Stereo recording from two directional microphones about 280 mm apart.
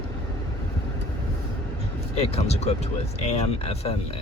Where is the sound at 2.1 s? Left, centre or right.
Left.